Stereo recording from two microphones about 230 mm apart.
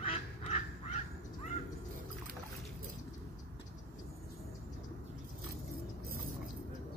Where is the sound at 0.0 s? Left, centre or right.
Left.